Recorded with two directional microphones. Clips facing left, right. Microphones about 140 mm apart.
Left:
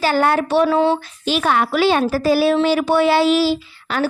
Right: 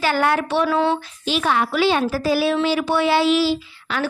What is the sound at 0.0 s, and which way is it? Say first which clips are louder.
Speech: left 3 dB; 35° left (ahead or behind).